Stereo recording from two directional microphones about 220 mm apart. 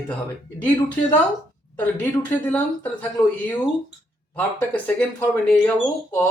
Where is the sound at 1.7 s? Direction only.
10° left (ahead or behind).